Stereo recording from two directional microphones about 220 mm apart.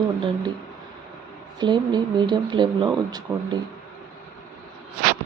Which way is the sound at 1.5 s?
20° right (ahead or behind).